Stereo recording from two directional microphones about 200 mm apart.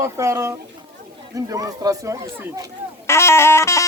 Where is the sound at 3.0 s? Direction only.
15° left (ahead or behind).